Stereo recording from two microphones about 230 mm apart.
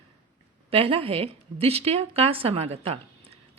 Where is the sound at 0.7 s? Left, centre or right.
Right.